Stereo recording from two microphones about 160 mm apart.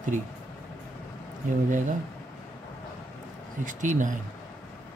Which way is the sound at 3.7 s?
55° right (ahead or behind).